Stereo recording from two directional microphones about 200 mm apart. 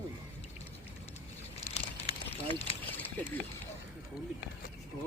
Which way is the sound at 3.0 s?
10° left (ahead or behind).